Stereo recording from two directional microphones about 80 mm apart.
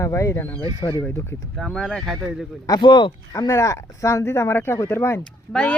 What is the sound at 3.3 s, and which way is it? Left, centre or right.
Speech, left.